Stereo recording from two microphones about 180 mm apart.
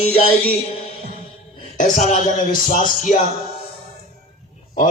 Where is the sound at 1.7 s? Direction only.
40° left (ahead or behind).